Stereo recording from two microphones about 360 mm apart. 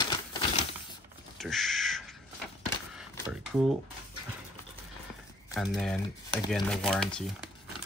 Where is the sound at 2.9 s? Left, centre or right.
Centre.